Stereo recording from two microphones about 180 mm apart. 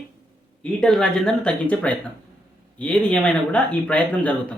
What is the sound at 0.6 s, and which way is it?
Speech, 5° left (ahead or behind).